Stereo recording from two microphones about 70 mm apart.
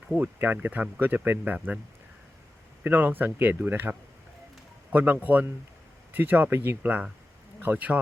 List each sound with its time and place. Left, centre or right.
0.2 s speech: right
2.8 s speech: right